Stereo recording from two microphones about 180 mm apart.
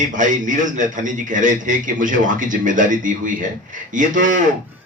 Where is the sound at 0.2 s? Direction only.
45° right (ahead or behind).